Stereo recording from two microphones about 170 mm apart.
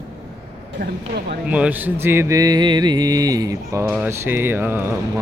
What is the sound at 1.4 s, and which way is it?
Music, 10° right (ahead or behind).